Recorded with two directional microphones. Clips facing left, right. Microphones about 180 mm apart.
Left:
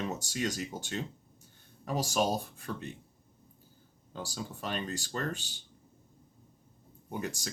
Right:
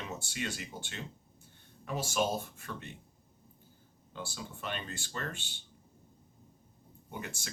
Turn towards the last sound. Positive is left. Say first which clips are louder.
# left 7 dB
turn(degrees=40)  # may be behind; listen again after turning